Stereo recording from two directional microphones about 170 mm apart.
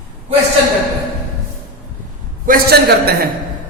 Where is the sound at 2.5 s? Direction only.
65° right (ahead or behind).